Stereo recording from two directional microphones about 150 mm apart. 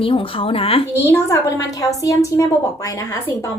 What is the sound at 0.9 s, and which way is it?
A woman's voice, 20° left (ahead or behind).